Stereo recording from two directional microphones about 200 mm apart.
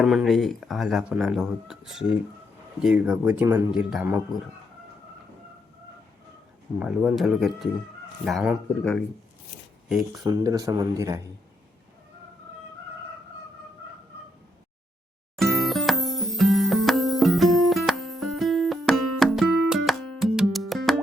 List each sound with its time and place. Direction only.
0.0 s speech: centre (ahead or behind)
6.7 s speech: 5° right (ahead or behind)
10.2 s speech: 20° right (ahead or behind)
15.4 s music: centre (ahead or behind)